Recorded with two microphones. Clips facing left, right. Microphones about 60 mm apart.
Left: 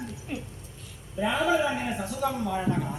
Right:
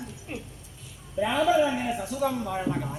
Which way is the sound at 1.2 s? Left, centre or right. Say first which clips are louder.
Right 2 dB; centre.